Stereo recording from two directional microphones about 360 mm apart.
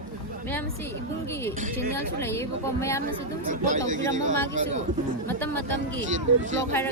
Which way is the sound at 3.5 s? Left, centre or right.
Right.